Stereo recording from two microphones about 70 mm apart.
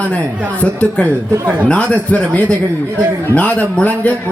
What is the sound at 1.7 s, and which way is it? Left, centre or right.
Speech, centre.